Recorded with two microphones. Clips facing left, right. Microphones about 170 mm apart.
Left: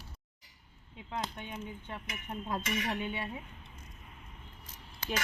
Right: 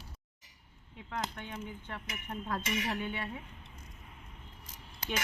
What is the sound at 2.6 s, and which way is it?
Speech, 25° right (ahead or behind).